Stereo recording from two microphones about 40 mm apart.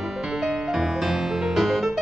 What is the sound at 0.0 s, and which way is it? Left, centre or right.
Music, centre.